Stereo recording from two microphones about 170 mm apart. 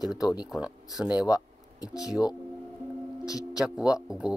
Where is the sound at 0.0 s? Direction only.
5° right (ahead or behind).